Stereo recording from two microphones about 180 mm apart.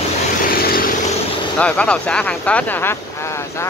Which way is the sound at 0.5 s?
55° left (ahead or behind).